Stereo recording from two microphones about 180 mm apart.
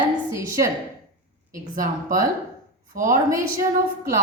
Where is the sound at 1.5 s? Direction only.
50° right (ahead or behind).